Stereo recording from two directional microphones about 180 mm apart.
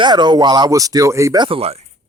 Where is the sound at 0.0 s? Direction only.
25° right (ahead or behind).